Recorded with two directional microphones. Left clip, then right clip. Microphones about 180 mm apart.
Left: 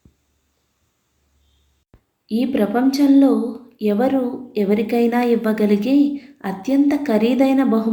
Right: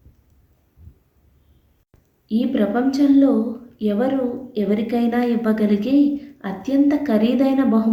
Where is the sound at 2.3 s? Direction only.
10° left (ahead or behind).